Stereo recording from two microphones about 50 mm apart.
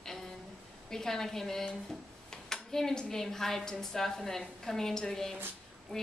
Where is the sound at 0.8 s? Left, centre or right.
Centre.